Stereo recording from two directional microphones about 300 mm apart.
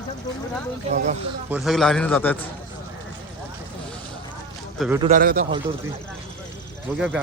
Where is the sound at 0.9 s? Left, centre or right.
Right.